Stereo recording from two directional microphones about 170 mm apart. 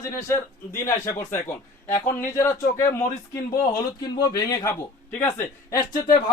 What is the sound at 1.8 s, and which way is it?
A man's voice, 15° left (ahead or behind).